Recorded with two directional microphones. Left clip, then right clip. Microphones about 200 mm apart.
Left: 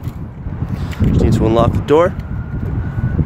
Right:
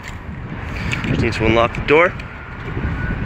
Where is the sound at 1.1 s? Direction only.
30° left (ahead or behind).